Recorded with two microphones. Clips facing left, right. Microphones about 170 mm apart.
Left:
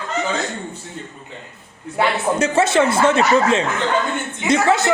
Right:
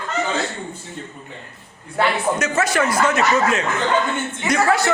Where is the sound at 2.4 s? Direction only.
25° left (ahead or behind).